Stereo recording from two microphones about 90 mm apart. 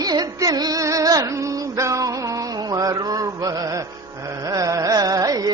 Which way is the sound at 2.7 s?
40° right (ahead or behind).